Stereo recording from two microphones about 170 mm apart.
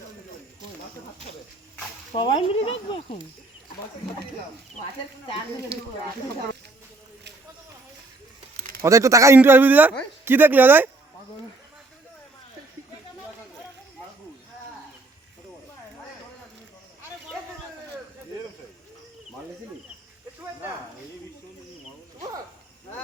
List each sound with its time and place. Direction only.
2.1 s speech: 30° left (ahead or behind)
5.7 s speech: 75° right (ahead or behind)
8.8 s speech: 20° right (ahead or behind)